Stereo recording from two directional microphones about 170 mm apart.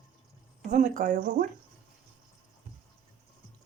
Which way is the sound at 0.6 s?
45° right (ahead or behind).